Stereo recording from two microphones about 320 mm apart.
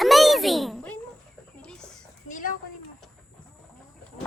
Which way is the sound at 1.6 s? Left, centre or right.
Centre.